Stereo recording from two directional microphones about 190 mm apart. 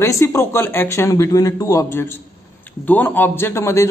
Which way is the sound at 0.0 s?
15° left (ahead or behind).